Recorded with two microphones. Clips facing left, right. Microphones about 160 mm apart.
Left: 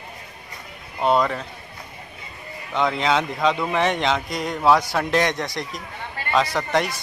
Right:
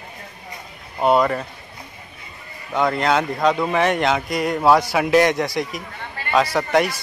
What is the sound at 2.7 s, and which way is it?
A man's voice, 5° right (ahead or behind).